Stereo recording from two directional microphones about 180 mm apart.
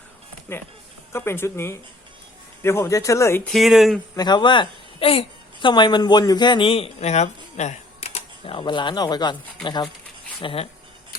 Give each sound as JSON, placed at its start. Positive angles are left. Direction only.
{"t": 1.1, "sound": "speech", "side_deg": 15}
{"t": 3.5, "sound": "speech", "side_deg": 0}
{"t": 4.1, "sound": "a woman's voice", "side_deg": 25}